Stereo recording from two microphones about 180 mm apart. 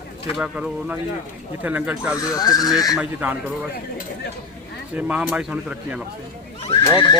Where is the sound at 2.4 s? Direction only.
20° left (ahead or behind).